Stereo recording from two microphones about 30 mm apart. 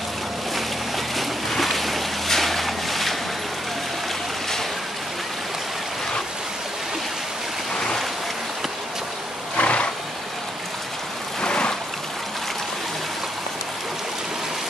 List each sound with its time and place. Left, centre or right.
0.6 s boat: centre
9.6 s wild animals: left
11.4 s a sound: left